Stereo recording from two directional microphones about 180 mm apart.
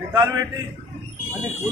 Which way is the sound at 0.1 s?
20° right (ahead or behind).